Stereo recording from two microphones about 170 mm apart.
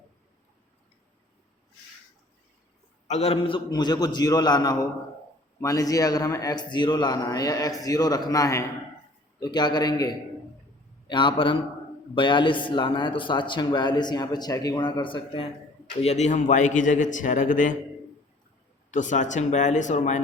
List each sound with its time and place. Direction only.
3.1 s a man's voice: 40° left (ahead or behind)
11.1 s a man's voice: 30° left (ahead or behind)
16.0 s a man's voice: 40° left (ahead or behind)
18.9 s a man's voice: 45° left (ahead or behind)